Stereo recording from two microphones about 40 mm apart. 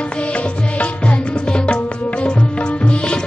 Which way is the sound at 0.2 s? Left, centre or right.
Left.